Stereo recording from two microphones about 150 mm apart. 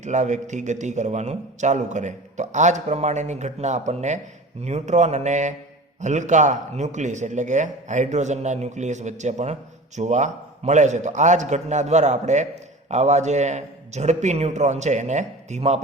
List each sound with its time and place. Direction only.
0.0 s a man's voice: 55° right (ahead or behind)